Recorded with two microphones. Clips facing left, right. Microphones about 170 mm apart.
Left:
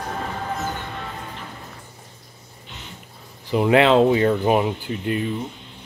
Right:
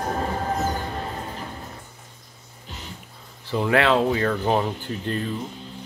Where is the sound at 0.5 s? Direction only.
35° right (ahead or behind).